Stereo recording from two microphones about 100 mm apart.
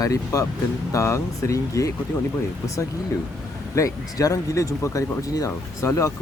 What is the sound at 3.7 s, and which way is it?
Speech, 35° left (ahead or behind).